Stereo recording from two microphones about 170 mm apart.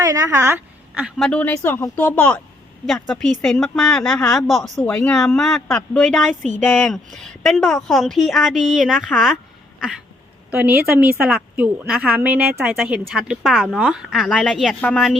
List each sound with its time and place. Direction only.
0.0 s a woman's voice: 20° right (ahead or behind)
1.0 s a woman's voice: 5° left (ahead or behind)
4.8 s a woman's voice: 10° left (ahead or behind)
10.8 s a woman's voice: 10° right (ahead or behind)